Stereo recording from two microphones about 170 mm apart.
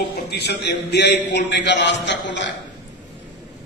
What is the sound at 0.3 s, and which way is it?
A man's voice, 75° left (ahead or behind).